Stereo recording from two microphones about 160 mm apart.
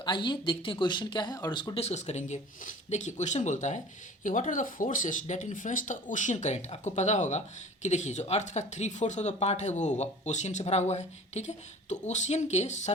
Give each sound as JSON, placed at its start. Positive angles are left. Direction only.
{"t": 0.0, "sound": "speech", "side_deg": 30}